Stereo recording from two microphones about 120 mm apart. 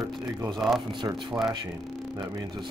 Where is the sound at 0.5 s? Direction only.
Centre (ahead or behind).